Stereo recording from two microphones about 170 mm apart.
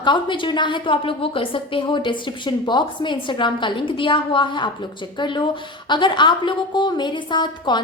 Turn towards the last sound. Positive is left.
turn(degrees=25)  # may be behind; listen again after turning